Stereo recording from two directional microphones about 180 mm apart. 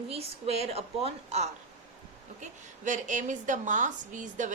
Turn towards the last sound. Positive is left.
turn(degrees=-45)  # may be behind; listen again after turning